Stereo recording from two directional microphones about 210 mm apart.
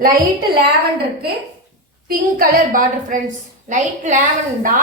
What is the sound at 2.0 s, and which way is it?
A woman's voice, 40° right (ahead or behind).